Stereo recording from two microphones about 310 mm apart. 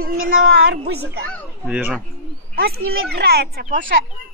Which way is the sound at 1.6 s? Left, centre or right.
Centre.